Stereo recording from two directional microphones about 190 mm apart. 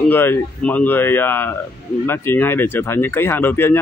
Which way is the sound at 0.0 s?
10° left (ahead or behind).